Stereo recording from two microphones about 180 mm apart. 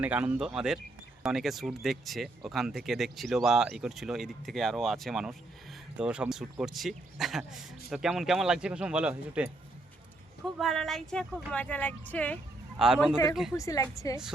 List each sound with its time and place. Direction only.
0.0 s speech: 10° right (ahead or behind)
10.6 s speech: centre (ahead or behind)
12.8 s speech: 5° right (ahead or behind)
13.6 s a woman's voice: 20° left (ahead or behind)